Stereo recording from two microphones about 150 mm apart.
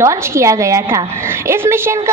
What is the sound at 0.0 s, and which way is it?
A woman's voice, 20° right (ahead or behind).